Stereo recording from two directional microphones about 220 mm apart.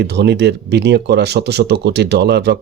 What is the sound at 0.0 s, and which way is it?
Speech, 50° right (ahead or behind).